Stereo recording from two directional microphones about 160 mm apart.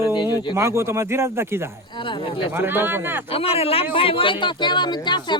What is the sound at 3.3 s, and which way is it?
Speech, 35° left (ahead or behind).